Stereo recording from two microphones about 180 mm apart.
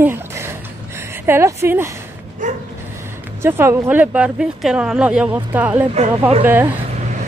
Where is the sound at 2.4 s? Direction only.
45° right (ahead or behind).